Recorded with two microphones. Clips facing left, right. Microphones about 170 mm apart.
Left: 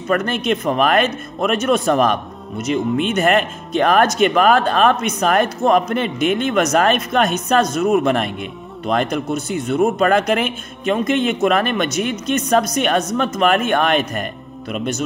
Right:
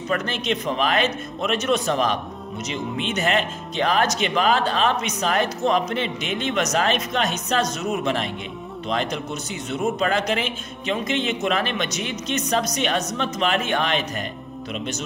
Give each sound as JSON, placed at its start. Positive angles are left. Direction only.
{"t": 0.1, "sound": "speech", "side_deg": 50}